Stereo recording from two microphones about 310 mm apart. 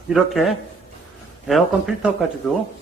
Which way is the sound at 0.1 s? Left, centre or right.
Centre.